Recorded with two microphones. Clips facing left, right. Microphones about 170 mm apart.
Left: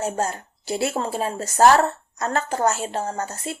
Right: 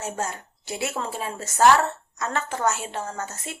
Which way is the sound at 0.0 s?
35° left (ahead or behind).